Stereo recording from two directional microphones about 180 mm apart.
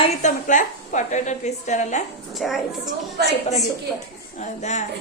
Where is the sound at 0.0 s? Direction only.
40° left (ahead or behind).